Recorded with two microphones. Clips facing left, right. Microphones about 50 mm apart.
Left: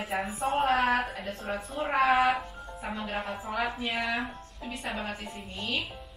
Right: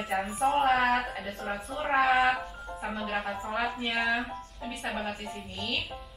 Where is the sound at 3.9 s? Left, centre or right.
Centre.